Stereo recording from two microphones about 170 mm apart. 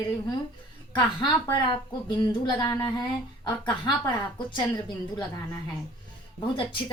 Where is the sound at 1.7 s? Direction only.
25° left (ahead or behind).